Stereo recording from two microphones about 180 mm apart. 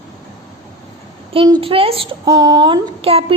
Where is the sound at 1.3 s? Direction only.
30° right (ahead or behind).